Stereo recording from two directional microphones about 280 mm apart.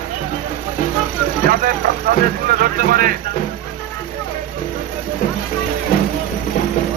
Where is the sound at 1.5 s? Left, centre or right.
Right.